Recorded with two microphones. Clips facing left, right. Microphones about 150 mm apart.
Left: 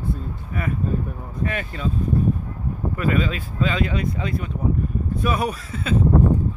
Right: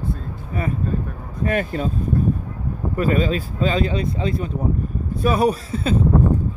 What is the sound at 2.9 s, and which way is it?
Speech, 35° right (ahead or behind).